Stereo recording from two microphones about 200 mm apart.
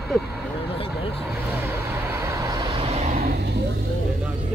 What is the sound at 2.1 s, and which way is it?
Vehicle, 15° right (ahead or behind).